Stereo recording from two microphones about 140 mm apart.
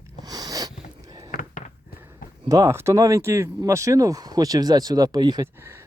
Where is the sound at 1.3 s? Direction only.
70° left (ahead or behind).